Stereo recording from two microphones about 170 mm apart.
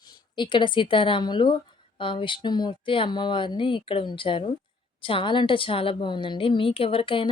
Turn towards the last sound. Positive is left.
turn(degrees=30)  # may be behind; listen again after turning